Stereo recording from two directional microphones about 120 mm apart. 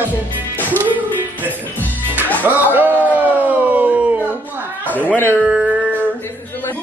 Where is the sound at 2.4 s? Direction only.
15° right (ahead or behind).